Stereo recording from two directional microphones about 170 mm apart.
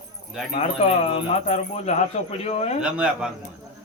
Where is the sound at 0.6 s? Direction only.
40° left (ahead or behind).